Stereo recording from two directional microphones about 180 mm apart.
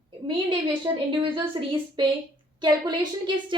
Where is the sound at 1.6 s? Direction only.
25° right (ahead or behind).